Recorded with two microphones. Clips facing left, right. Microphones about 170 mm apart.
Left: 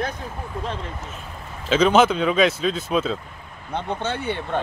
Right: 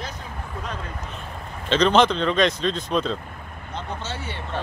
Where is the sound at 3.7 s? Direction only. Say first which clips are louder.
Left 6 dB; 60° left (ahead or behind).